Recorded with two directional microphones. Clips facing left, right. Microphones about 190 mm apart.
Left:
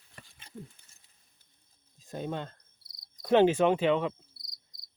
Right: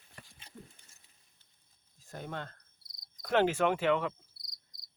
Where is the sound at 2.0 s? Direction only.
20° left (ahead or behind).